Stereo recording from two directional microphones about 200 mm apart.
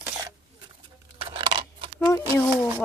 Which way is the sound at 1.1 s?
25° right (ahead or behind).